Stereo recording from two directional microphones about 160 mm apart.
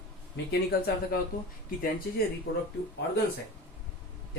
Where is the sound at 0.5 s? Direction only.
85° left.